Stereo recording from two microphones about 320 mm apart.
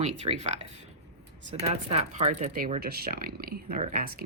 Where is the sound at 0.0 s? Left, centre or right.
Centre.